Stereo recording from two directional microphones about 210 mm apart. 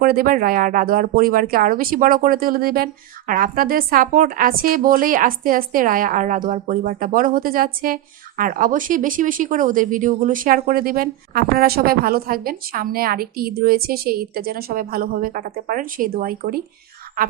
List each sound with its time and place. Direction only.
0.0 s speech: 45° right (ahead or behind)